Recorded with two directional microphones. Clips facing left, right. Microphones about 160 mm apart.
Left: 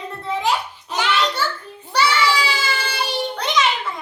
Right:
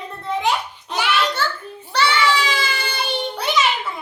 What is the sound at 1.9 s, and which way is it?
Speech, 10° left (ahead or behind).